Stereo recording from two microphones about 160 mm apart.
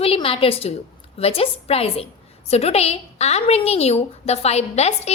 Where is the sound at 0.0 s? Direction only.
35° left (ahead or behind).